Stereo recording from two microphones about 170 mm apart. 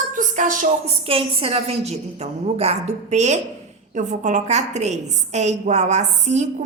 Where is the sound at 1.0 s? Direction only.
35° right (ahead or behind).